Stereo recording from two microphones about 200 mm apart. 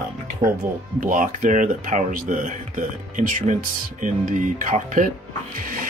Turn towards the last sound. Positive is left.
turn(degrees=-40)  # may be behind; listen again after turning